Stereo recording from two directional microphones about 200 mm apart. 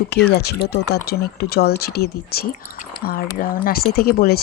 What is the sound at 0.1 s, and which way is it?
Speech, 55° left (ahead or behind).